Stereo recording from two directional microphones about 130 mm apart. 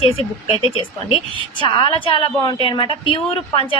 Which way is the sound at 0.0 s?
50° left (ahead or behind).